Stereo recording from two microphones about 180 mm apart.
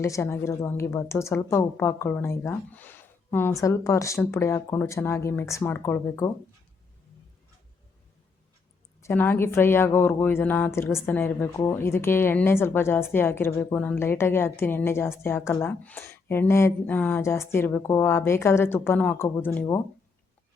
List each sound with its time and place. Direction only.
0.0 s speech: 15° left (ahead or behind)
9.0 s speech: 15° left (ahead or behind)